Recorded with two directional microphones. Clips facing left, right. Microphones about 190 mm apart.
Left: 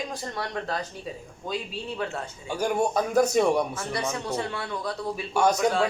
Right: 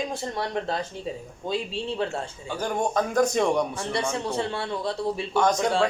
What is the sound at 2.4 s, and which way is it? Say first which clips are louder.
A man's voice: left 3 dB; 10° left (ahead or behind).